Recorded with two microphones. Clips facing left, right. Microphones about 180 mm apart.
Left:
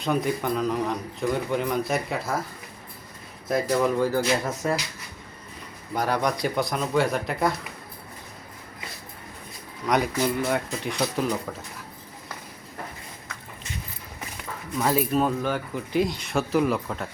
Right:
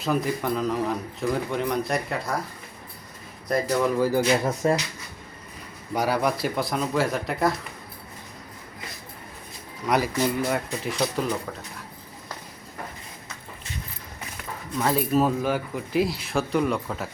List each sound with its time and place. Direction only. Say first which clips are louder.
0.0 s speech: even; centre (ahead or behind)
3.5 s speech: even; centre (ahead or behind)
4.6 s speech: right 4 dB; 30° right (ahead or behind)
5.9 s speech: right 1 dB; 10° right (ahead or behind)
9.8 s speech: even; 5° right (ahead or behind)
14.3 s speech: even; centre (ahead or behind)